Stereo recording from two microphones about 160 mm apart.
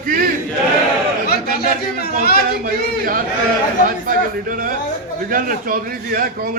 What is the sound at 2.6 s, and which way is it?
Speech, 60° right (ahead or behind).